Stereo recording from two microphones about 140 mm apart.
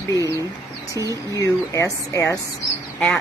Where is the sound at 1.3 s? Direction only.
20° left (ahead or behind).